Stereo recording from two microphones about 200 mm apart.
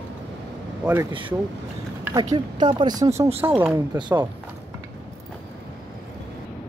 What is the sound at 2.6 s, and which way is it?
Speech, 20° right (ahead or behind).